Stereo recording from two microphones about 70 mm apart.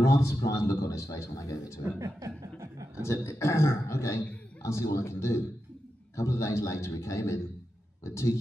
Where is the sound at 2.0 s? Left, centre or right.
Right.